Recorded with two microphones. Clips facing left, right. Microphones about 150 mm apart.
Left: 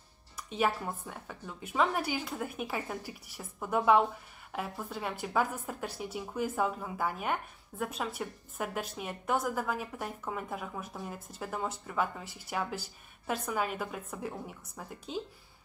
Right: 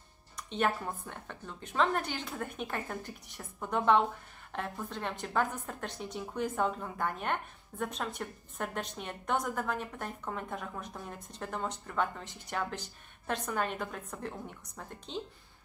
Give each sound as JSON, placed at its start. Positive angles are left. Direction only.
{"t": 0.4, "sound": "a woman's voice", "side_deg": 5}